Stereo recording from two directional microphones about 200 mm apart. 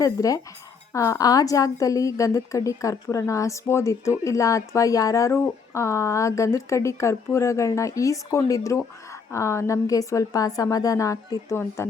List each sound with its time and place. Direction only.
0.0 s speech: 15° left (ahead or behind)